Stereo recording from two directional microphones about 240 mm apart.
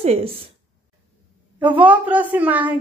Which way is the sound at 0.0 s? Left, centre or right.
Right.